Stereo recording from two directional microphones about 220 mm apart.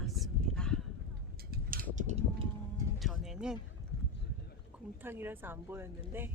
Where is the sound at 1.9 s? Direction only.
30° right (ahead or behind).